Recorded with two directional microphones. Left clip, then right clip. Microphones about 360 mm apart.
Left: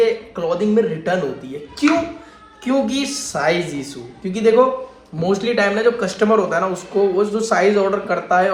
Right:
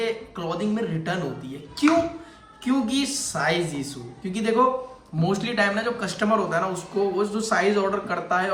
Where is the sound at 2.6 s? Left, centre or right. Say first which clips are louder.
Left 6 dB; centre.